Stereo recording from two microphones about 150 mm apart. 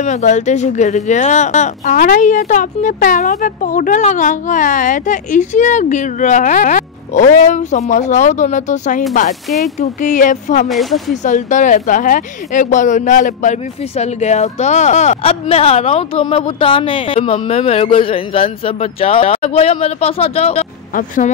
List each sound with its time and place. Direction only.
0.0 s speech: 55° left (ahead or behind)
10.7 s speech: centre (ahead or behind)
11.2 s speech: 55° left (ahead or behind)